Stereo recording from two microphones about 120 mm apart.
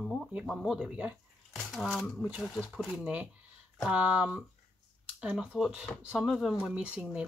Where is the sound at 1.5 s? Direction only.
Centre (ahead or behind).